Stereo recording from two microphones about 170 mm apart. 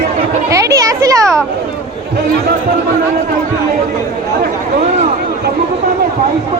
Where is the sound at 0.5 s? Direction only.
20° right (ahead or behind).